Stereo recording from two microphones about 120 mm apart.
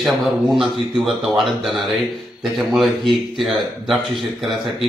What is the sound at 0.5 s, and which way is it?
Speech, 5° right (ahead or behind).